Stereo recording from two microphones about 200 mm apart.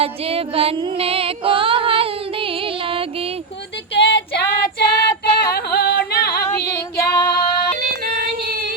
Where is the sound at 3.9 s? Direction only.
55° left (ahead or behind).